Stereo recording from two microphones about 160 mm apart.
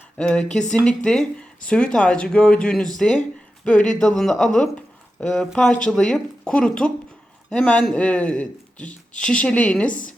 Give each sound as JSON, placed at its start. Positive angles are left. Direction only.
{"t": 0.2, "sound": "a man's voice", "side_deg": 5}